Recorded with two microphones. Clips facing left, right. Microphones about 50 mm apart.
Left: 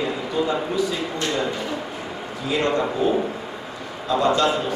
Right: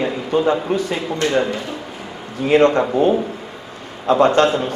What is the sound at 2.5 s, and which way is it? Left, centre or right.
A man's voice, right.